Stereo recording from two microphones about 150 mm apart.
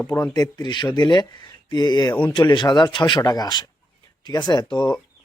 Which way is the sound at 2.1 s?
10° left (ahead or behind).